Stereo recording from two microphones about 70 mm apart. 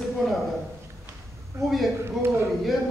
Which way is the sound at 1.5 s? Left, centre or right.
Right.